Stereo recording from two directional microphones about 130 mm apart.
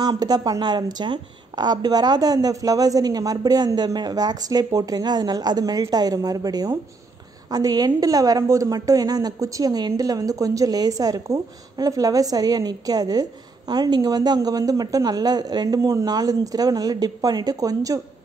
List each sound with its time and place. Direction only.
0.0 s a woman's voice: 30° right (ahead or behind)